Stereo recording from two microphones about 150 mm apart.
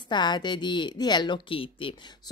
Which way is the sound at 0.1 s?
30° left (ahead or behind).